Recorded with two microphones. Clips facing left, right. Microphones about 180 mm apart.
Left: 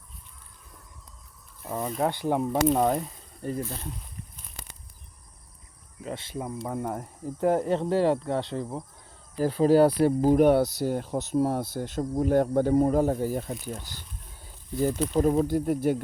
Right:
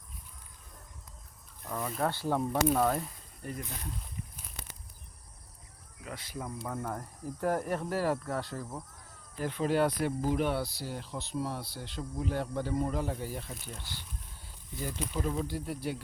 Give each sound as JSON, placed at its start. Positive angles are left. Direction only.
{"t": 1.6, "sound": "a sound", "side_deg": 20}
{"t": 2.0, "sound": "speech", "side_deg": 20}
{"t": 6.0, "sound": "speech", "side_deg": 25}
{"t": 9.4, "sound": "speech", "side_deg": 35}